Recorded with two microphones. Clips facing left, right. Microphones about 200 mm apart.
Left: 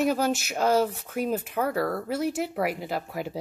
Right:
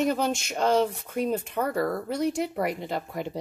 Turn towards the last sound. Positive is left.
turn(degrees=5)  # may be behind; listen again after turning